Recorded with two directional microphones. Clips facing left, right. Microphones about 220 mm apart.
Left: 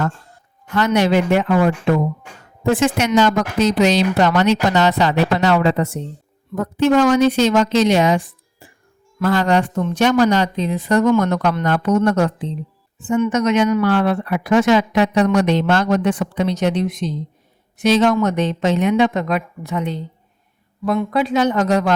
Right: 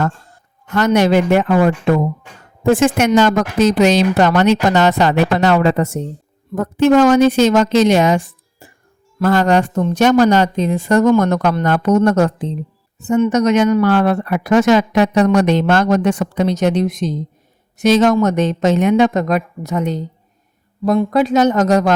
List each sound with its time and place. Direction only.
0.7 s speech: 45° right (ahead or behind)